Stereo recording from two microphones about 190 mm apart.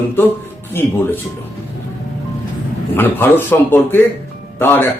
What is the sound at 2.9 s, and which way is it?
A man's voice, 10° left (ahead or behind).